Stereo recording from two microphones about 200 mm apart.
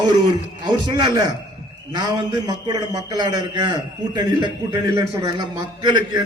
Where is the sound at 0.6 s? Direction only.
20° right (ahead or behind).